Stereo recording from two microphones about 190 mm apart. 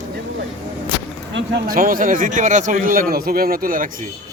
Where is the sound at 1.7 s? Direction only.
45° right (ahead or behind).